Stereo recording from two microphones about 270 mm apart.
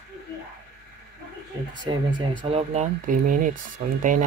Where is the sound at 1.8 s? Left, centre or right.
Centre.